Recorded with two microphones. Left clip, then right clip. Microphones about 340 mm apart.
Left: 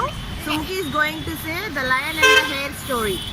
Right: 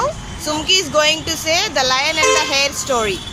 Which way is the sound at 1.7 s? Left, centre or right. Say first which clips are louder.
Right 5 dB; centre.